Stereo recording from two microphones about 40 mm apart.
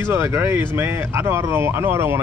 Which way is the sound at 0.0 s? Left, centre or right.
Right.